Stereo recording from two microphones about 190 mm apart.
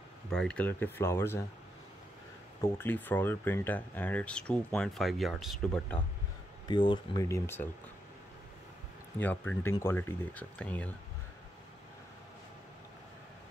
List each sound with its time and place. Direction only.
0.3 s speech: 5° left (ahead or behind)
2.6 s speech: 10° left (ahead or behind)
6.7 s speech: 25° left (ahead or behind)
7.2 s speech: 15° left (ahead or behind)
9.2 s speech: 10° left (ahead or behind)